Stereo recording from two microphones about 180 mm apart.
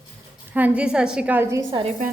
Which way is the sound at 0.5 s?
10° right (ahead or behind).